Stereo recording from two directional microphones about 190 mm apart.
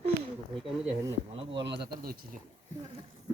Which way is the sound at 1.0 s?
25° right (ahead or behind).